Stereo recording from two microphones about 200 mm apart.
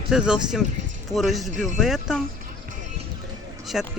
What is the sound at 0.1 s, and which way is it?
Speech, 5° right (ahead or behind).